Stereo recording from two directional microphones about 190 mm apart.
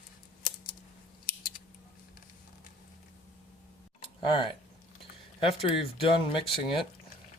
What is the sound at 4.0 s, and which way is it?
Tick, 25° left (ahead or behind).